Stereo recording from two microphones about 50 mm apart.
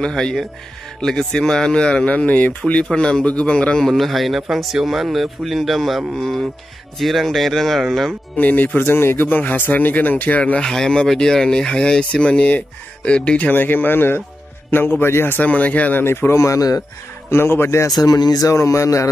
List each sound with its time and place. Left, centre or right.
0.0 s speech: centre
2.1 s speech: left
3.7 s speech: centre
8.4 s speech: left
8.7 s speech: left
10.6 s speech: centre
13.5 s a man's voice: left
15.4 s speech: left
16.0 s a man's voice: left
18.5 s speech: left